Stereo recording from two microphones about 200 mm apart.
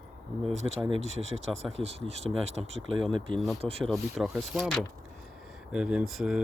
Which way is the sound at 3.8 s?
Centre (ahead or behind).